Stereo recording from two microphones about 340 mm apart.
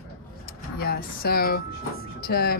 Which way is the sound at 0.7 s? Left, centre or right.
Left.